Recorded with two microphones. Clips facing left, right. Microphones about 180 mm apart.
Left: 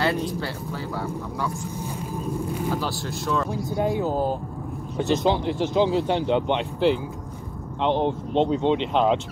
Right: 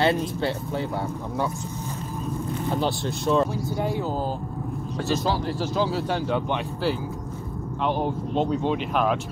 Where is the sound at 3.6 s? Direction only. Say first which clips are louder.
Left 3 dB; 15° left (ahead or behind).